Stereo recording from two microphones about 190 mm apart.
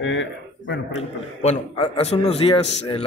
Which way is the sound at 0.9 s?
35° left (ahead or behind).